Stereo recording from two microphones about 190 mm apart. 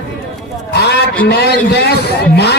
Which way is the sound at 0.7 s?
60° left (ahead or behind).